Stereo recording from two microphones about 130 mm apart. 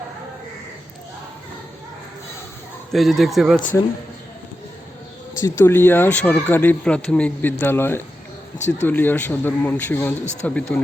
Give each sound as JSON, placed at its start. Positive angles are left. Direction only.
{"t": 2.9, "sound": "speech", "side_deg": 0}
{"t": 5.4, "sound": "speech", "side_deg": 20}
{"t": 8.5, "sound": "speech", "side_deg": 65}
{"t": 8.9, "sound": "speech", "side_deg": 15}